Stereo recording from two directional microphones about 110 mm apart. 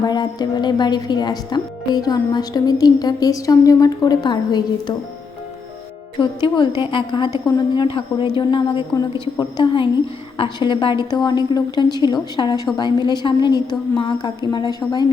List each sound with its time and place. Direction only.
0.0 s speech: 40° left (ahead or behind)
6.1 s a woman's voice: 45° left (ahead or behind)